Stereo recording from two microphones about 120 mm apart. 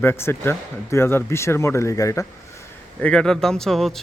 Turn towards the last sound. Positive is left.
turn(degrees=5)  # may be behind; listen again after turning